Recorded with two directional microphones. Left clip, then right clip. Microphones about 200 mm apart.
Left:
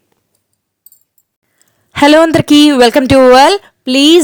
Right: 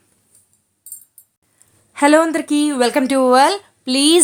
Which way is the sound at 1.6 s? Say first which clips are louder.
Left 7 dB; 40° left (ahead or behind).